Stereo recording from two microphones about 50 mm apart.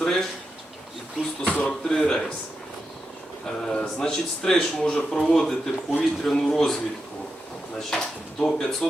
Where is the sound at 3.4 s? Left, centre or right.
Centre.